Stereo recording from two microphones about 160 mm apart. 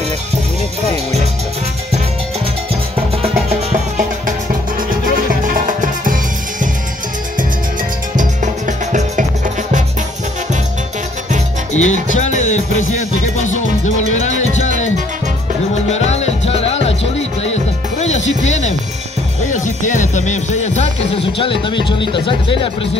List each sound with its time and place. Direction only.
3.2 s music: 45° right (ahead or behind)
5.3 s music: 55° right (ahead or behind)
8.2 s music: 50° right (ahead or behind)
11.7 s music: 45° left (ahead or behind)
15.7 s music: 45° left (ahead or behind)
21.8 s speech: 30° left (ahead or behind)